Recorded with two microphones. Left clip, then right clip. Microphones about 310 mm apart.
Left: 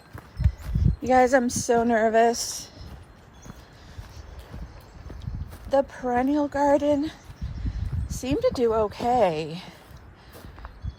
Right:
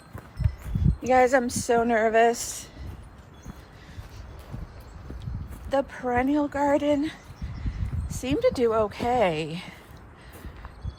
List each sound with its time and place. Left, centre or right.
1.0 s speech: left
5.2 s speech: centre